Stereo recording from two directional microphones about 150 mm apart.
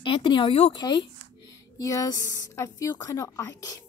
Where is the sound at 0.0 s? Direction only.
35° left (ahead or behind).